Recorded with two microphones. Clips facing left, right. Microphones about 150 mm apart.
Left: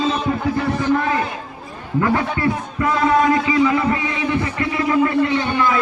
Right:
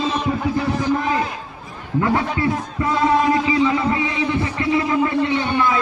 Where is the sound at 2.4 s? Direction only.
25° right (ahead or behind).